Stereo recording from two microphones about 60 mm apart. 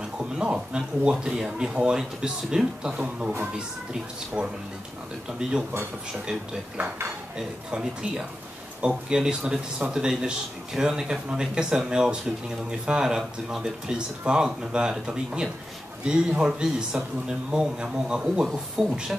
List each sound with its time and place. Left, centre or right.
0.2 s speech: centre
4.4 s speech: centre
7.3 s speech: centre